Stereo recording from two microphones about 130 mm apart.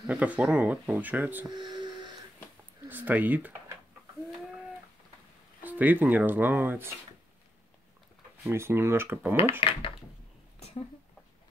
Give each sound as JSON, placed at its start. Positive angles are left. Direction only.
{"t": 0.0, "sound": "speech", "side_deg": -10}
{"t": 1.5, "sound": "a sound", "side_deg": -35}
{"t": 2.8, "sound": "speech", "side_deg": -15}
{"t": 5.6, "sound": "speech", "side_deg": -15}
{"t": 8.5, "sound": "speech", "side_deg": -20}
{"t": 9.6, "sound": "speech", "side_deg": 40}